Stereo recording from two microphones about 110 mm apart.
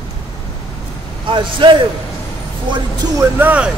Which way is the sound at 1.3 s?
50° right (ahead or behind).